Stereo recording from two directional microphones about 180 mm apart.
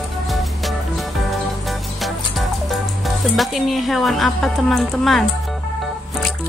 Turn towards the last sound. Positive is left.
turn(degrees=0)  # may be behind; listen again after turning